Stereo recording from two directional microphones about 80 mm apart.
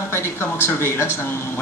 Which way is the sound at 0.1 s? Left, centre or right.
Left.